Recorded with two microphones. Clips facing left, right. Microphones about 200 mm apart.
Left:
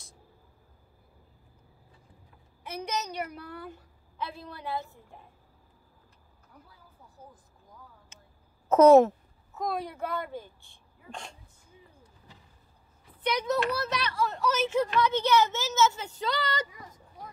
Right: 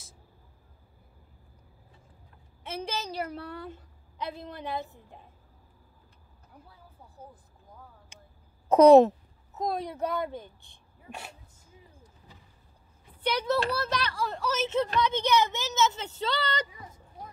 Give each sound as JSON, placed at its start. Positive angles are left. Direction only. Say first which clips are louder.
{"t": 2.6, "sound": "a woman's voice", "louder": "left 1 dB", "side_deg": -25}
{"t": 8.6, "sound": "a child's voice", "louder": "right 1 dB", "side_deg": -15}
{"t": 13.2, "sound": "a child's voice", "louder": "even", "side_deg": -30}